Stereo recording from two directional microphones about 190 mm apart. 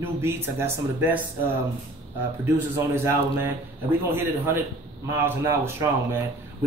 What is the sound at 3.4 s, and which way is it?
Speech, 10° right (ahead or behind).